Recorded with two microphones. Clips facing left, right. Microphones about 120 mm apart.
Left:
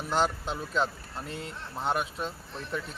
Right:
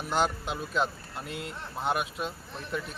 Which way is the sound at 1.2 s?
30° left (ahead or behind).